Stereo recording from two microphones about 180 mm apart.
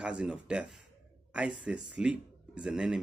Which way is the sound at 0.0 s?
5° right (ahead or behind).